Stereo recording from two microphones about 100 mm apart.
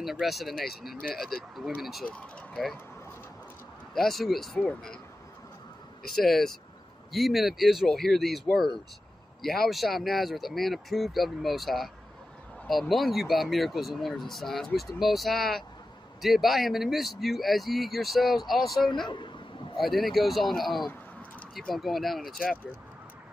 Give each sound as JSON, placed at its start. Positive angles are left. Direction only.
{"t": 0.0, "sound": "speech", "side_deg": 0}
{"t": 2.0, "sound": "speech", "side_deg": 10}
{"t": 3.9, "sound": "speech", "side_deg": 0}
{"t": 4.6, "sound": "speech", "side_deg": 15}
{"t": 6.1, "sound": "speech", "side_deg": 5}
{"t": 19.0, "sound": "a woman's voice", "side_deg": 50}
{"t": 19.8, "sound": "speech", "side_deg": 0}